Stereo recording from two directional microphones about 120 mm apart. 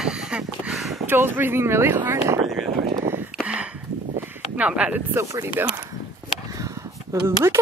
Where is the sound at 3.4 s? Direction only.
10° right (ahead or behind).